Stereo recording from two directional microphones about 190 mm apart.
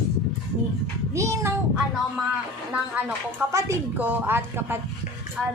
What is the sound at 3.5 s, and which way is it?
A woman's voice, 15° right (ahead or behind).